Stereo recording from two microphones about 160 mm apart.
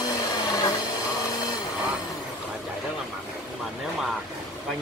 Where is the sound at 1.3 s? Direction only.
25° left (ahead or behind).